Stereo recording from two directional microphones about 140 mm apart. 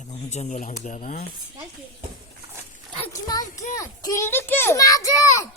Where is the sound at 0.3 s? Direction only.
55° left (ahead or behind).